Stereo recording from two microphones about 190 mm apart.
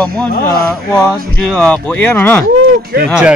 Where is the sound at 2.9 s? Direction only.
50° right (ahead or behind).